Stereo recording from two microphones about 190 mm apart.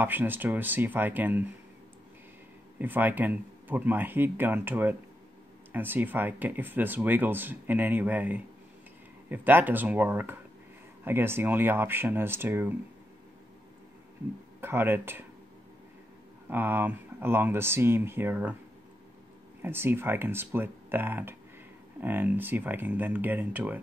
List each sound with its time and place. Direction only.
0.0 s speech: 10° right (ahead or behind)
2.8 s speech: 10° right (ahead or behind)
14.6 s speech: 10° right (ahead or behind)
16.4 s speech: 10° right (ahead or behind)
19.6 s speech: 10° right (ahead or behind)